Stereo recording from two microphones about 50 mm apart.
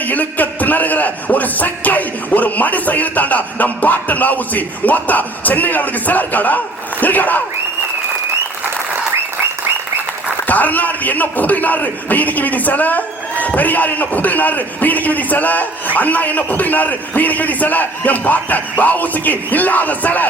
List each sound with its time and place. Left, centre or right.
0.0 s a man's voice: left
10.4 s a man's voice: left